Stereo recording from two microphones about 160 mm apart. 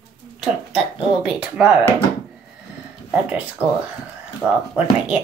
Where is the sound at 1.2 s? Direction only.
5° right (ahead or behind).